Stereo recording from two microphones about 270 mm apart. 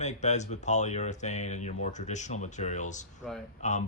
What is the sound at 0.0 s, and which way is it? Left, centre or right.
Speech, left.